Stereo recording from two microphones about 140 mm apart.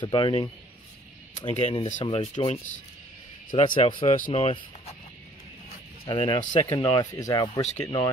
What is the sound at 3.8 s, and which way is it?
Speech, 40° left (ahead or behind).